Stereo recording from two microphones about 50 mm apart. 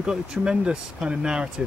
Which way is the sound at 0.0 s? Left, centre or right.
Centre.